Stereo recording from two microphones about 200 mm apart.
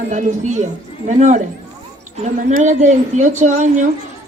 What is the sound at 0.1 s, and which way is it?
Speech, 35° right (ahead or behind).